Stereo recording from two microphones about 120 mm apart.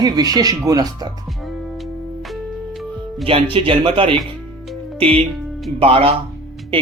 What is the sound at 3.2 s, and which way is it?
Speech, 50° right (ahead or behind).